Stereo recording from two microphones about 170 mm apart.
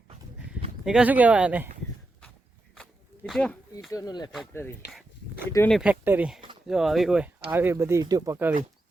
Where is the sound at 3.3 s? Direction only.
Centre (ahead or behind).